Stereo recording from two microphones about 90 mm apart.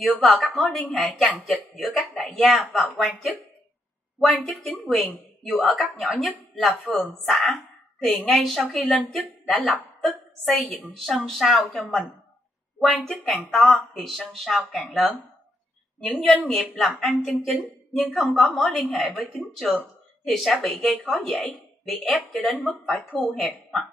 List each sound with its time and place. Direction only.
0.0 s a woman's voice: centre (ahead or behind)
4.3 s speech: 15° left (ahead or behind)
4.8 s a woman's voice: centre (ahead or behind)
11.7 s speech: 15° left (ahead or behind)
12.8 s a woman's voice: 5° left (ahead or behind)